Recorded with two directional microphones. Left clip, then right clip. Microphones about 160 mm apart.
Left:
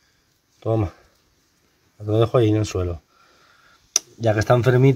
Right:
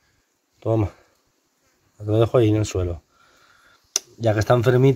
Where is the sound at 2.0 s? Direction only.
15° right (ahead or behind).